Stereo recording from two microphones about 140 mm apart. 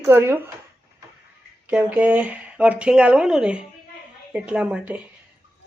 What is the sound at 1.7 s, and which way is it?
Speech, 10° right (ahead or behind).